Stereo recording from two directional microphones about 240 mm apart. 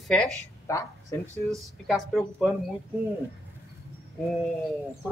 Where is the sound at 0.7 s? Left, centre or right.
Centre.